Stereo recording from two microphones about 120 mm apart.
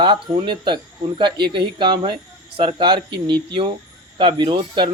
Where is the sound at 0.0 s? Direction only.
40° right (ahead or behind).